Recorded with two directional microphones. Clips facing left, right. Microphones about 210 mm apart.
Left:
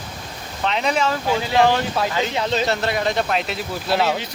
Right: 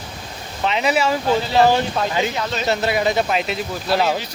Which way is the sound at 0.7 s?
5° right (ahead or behind).